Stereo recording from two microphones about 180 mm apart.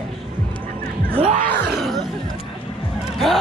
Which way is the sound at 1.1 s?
35° right (ahead or behind).